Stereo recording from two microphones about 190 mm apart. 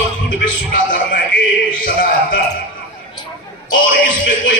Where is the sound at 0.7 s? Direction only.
50° left (ahead or behind).